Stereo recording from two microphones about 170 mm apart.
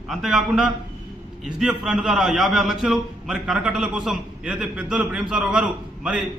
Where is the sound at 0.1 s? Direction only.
5° right (ahead or behind).